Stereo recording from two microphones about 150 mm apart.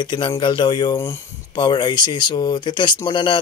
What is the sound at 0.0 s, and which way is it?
Speech, 30° left (ahead or behind).